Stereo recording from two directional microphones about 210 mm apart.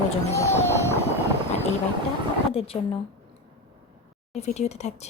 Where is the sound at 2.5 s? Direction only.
25° left (ahead or behind).